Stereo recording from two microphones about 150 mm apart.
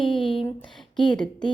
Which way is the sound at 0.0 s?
35° left (ahead or behind).